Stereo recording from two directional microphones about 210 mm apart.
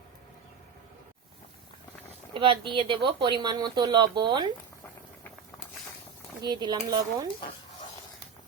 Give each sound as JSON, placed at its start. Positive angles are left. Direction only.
{"t": 2.3, "sound": "speech", "side_deg": -25}
{"t": 6.4, "sound": "speech", "side_deg": -20}